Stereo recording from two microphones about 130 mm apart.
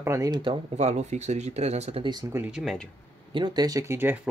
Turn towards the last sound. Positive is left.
turn(degrees=-20)  # may be behind; listen again after turning